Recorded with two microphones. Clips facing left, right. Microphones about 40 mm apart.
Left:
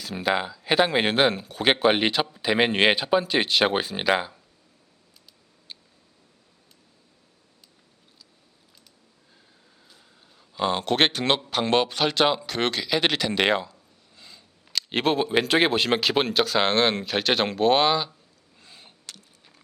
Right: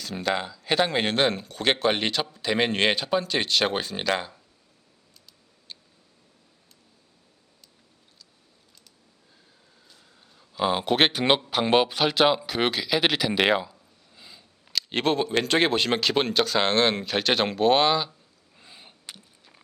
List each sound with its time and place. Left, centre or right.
0.0 s speech: centre
9.9 s speech: centre
18.5 s a sound: centre